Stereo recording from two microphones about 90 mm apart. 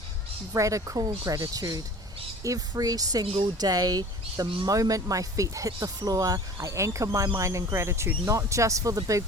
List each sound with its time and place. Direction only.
0.5 s speech: 35° right (ahead or behind)